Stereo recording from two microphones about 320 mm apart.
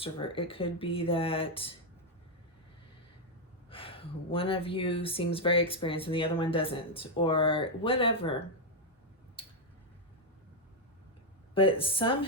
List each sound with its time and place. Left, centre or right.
0.0 s speech: centre
3.7 s speech: centre
9.4 s tick-tock: centre
11.5 s speech: centre